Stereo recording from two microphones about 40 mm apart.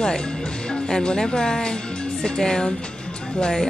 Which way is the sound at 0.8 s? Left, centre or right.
Centre.